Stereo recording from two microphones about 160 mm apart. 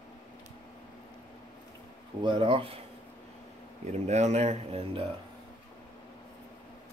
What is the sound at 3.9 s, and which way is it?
Speech, 45° right (ahead or behind).